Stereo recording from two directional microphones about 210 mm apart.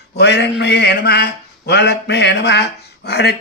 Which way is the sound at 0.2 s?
55° left (ahead or behind).